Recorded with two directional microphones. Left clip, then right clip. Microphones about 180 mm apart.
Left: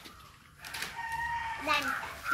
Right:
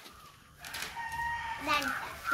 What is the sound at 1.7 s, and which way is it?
Speech, 60° right (ahead or behind).